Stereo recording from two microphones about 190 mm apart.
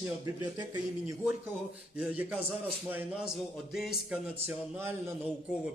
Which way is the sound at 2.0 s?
5° right (ahead or behind).